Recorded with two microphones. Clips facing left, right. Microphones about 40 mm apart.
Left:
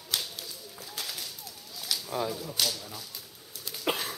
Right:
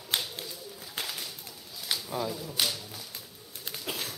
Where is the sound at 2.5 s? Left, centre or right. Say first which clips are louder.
Right 2 dB; centre.